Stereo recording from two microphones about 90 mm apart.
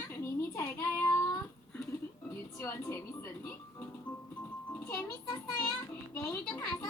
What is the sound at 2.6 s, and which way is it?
Music, 30° left (ahead or behind).